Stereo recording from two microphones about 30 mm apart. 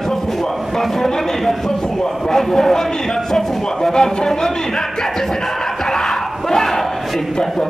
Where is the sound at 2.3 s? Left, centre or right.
Centre.